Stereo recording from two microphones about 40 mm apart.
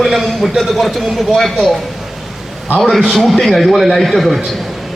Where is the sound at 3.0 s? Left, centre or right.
Centre.